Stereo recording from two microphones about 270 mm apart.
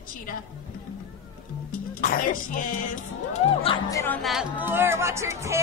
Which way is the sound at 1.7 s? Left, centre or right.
Left.